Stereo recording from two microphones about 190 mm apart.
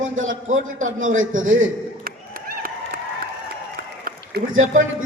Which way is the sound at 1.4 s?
90° right.